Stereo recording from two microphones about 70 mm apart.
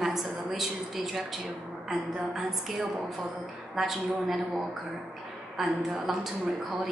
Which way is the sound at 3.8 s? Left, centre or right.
Centre.